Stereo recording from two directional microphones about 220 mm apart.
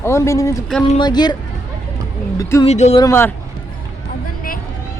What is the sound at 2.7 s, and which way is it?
Speech, 30° left (ahead or behind).